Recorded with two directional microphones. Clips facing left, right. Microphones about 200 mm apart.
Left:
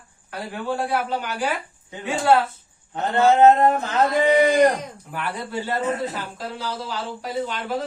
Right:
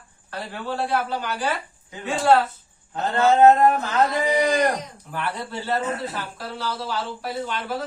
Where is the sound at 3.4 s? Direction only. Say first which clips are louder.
Right 2 dB; 25° left (ahead or behind).